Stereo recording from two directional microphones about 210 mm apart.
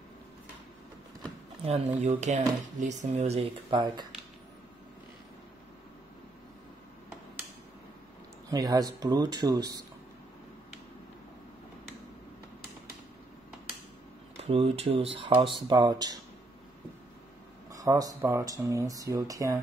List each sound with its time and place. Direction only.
1.6 s speech: 30° right (ahead or behind)
8.5 s speech: 15° right (ahead or behind)
14.3 s speech: 30° right (ahead or behind)
17.6 s speech: 15° right (ahead or behind)